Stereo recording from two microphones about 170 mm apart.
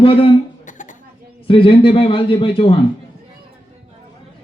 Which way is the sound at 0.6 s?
50° left (ahead or behind).